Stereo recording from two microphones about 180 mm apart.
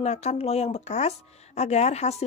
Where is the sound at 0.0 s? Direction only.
35° left (ahead or behind).